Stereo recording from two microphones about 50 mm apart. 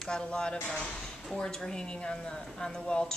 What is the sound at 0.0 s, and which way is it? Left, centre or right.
A woman's voice, centre.